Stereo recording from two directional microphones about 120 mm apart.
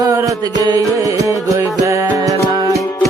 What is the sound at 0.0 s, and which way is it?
Music, 30° right (ahead or behind).